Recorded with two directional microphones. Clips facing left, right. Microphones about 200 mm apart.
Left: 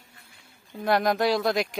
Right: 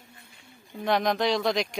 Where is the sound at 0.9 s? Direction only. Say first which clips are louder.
Left 2 dB; 5° left (ahead or behind).